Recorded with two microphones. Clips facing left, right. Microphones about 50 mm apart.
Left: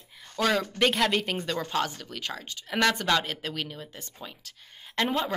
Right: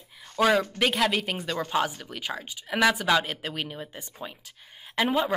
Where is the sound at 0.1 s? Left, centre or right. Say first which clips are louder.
Right 4 dB; centre.